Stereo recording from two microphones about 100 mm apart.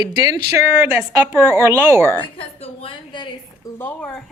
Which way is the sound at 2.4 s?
65° left (ahead or behind).